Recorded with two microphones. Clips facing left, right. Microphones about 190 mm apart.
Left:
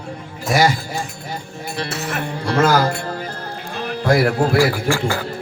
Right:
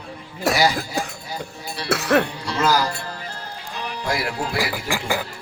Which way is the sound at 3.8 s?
50° left (ahead or behind).